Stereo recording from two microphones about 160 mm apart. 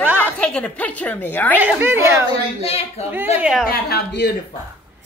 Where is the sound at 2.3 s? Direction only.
40° left (ahead or behind).